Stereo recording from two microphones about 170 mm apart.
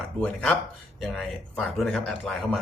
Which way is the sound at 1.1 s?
Centre (ahead or behind).